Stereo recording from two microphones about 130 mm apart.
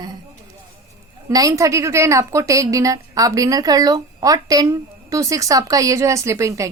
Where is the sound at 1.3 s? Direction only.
25° right (ahead or behind).